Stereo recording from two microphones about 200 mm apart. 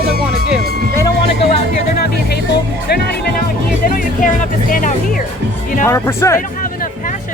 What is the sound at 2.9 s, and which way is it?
Speech, 55° left (ahead or behind).